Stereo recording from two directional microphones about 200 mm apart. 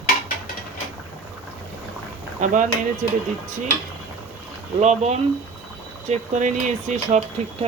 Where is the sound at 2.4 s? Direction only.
40° right (ahead or behind).